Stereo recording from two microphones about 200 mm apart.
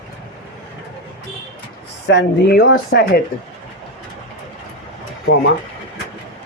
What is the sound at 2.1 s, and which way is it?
Speech, 60° left (ahead or behind).